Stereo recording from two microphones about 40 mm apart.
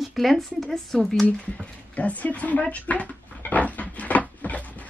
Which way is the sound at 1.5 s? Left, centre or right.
Left.